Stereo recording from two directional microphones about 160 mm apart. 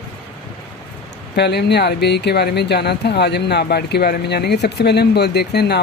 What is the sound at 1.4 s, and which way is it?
Speech, 90° left.